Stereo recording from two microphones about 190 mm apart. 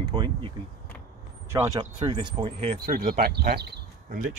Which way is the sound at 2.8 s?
50° right (ahead or behind).